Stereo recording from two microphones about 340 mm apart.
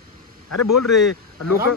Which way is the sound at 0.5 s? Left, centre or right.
Left.